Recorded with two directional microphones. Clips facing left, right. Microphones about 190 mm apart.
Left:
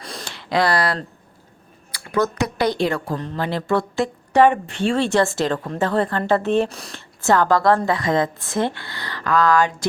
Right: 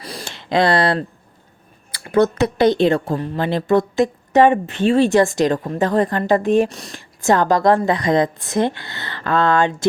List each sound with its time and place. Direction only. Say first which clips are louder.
0.0 s a sound: right 2 dB; 5° right (ahead or behind)
0.3 s a woman's voice: right 3 dB; 25° right (ahead or behind)
6.7 s speech: right 2 dB; centre (ahead or behind)
6.9 s a woman's voice: right 1 dB; 15° right (ahead or behind)